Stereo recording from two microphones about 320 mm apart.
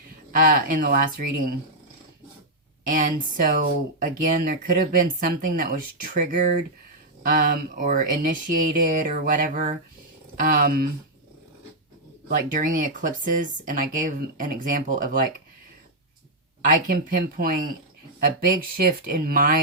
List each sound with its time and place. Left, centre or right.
0.3 s speech: right
2.9 s speech: right
12.5 s speech: right
16.6 s speech: right